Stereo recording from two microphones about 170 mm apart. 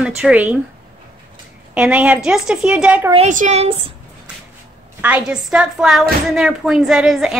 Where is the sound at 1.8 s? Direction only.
10° right (ahead or behind).